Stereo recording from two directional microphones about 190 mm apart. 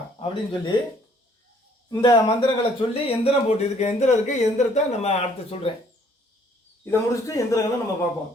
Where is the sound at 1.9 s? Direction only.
25° left (ahead or behind).